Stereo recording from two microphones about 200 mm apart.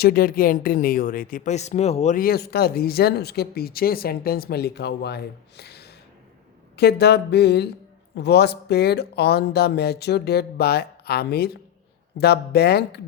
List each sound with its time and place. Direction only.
0.0 s speech: 50° left (ahead or behind)
6.7 s music: 55° left (ahead or behind)
8.1 s speech: 55° left (ahead or behind)